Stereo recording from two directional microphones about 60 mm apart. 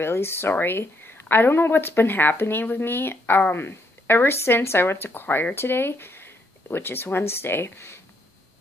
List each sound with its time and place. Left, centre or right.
0.0 s speech: left